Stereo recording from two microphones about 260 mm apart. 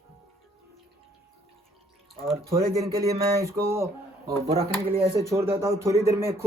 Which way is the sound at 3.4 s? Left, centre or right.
Centre.